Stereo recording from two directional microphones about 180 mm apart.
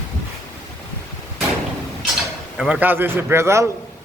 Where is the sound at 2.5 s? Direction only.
5° right (ahead or behind).